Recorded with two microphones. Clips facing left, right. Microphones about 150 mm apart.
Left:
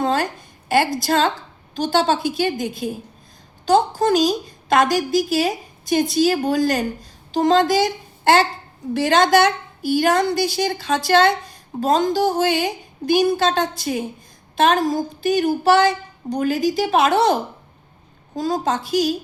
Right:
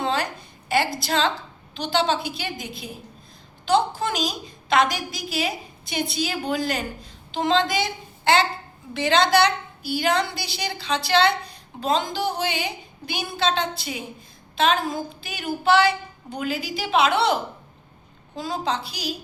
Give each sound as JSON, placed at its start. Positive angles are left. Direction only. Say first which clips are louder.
{"t": 0.0, "sound": "a sound", "louder": "left 5 dB", "side_deg": 45}
{"t": 0.7, "sound": "a woman's voice", "louder": "left 5 dB", "side_deg": 50}
{"t": 18.3, "sound": "a woman's voice", "louder": "left 5 dB", "side_deg": 40}